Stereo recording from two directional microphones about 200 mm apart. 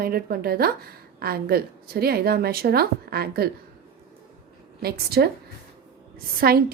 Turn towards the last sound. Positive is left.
turn(degrees=-50)  # may be behind; listen again after turning